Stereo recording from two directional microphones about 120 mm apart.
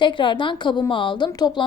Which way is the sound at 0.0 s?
40° left (ahead or behind).